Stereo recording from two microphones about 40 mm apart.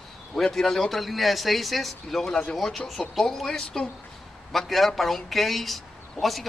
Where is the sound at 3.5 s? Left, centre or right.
Centre.